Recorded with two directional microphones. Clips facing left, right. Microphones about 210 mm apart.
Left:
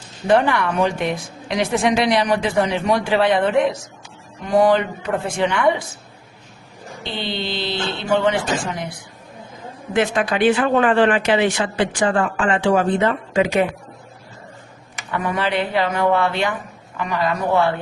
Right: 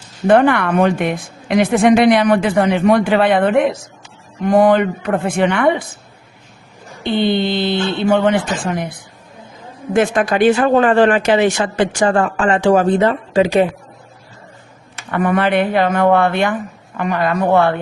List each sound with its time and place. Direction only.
0.3 s a woman's voice: 55° right (ahead or behind)
7.0 s speech: 55° right (ahead or behind); by 13.7 s 35° right (ahead or behind)
15.1 s a woman's voice: 55° right (ahead or behind)